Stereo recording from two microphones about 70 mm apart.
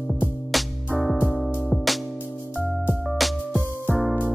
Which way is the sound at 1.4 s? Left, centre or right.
Centre.